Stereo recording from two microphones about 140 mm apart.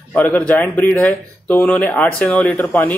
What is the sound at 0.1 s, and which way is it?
Speech, 10° left (ahead or behind).